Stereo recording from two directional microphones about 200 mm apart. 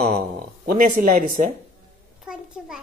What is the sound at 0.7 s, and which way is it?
Speech, 45° right (ahead or behind).